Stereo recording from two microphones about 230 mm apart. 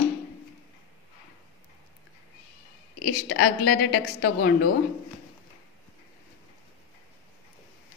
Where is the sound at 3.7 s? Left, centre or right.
Left.